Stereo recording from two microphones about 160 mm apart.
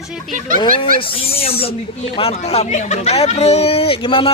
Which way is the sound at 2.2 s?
40° left (ahead or behind).